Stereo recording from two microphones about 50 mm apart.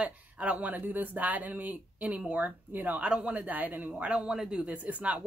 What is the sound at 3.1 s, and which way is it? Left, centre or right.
Speech, right.